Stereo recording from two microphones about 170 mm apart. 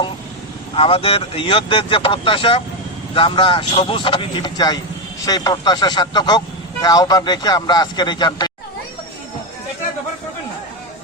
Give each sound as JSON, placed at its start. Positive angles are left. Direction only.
{"t": 0.8, "sound": "speech", "side_deg": 35}